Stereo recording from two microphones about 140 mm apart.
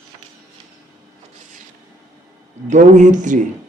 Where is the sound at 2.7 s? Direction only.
60° right (ahead or behind).